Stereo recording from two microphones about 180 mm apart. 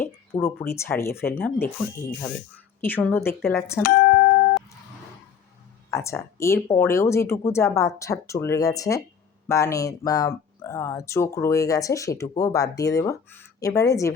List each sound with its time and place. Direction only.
0.0 s speech: 10° left (ahead or behind)
3.8 s music: 60° left (ahead or behind)
5.9 s speech: 15° left (ahead or behind)